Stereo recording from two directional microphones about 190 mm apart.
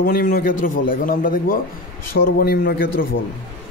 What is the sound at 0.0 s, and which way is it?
Speech, 50° left (ahead or behind).